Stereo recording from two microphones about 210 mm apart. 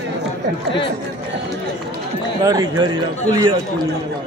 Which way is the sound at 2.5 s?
20° right (ahead or behind).